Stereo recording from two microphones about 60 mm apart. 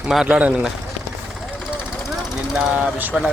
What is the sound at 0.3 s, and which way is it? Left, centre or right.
Speech, right.